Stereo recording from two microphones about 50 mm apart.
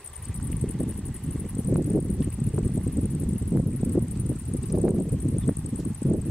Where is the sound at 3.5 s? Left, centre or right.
Left.